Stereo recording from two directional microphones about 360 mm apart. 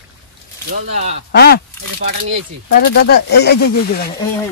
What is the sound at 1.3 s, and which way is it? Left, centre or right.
Speech, left.